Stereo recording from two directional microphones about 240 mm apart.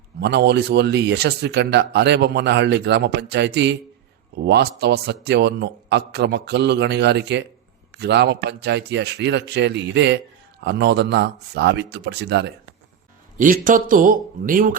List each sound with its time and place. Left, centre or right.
0.2 s a man's voice: right
13.4 s speech: right